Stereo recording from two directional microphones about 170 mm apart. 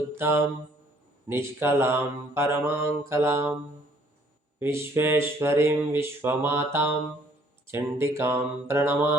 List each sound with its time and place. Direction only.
0.2 s speech: 15° right (ahead or behind)
4.6 s speech: 15° right (ahead or behind)